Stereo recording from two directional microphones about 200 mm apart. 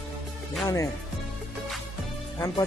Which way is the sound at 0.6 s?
15° left (ahead or behind).